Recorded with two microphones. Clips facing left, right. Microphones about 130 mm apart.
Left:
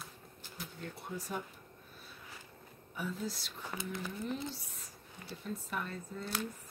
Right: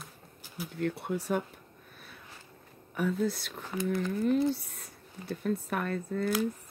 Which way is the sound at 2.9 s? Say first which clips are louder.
Right 10 dB; 60° right (ahead or behind).